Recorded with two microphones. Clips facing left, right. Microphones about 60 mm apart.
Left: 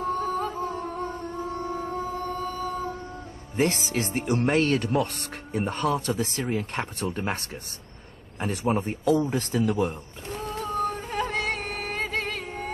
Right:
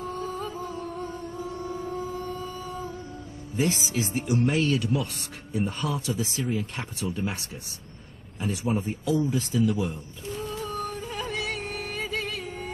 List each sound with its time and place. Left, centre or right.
0.0 s music: left
3.5 s speech: left
8.4 s a sound: left